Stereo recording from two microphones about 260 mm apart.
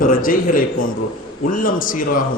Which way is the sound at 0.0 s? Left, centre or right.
Left.